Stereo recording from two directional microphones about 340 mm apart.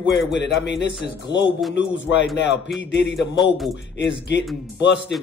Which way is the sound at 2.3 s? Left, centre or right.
Left.